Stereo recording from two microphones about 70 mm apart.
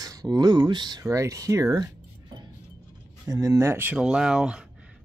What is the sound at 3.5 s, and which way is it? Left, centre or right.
Speech, right.